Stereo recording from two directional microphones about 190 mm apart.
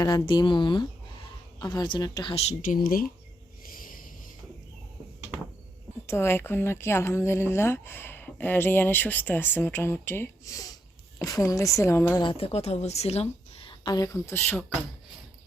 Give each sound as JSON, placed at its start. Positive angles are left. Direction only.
{"t": 0.0, "sound": "a woman's voice", "side_deg": 20}
{"t": 2.5, "sound": "speech", "side_deg": 45}
{"t": 3.6, "sound": "a sound", "side_deg": 50}
{"t": 6.1, "sound": "speech", "side_deg": 10}
{"t": 12.2, "sound": "a woman's voice", "side_deg": 30}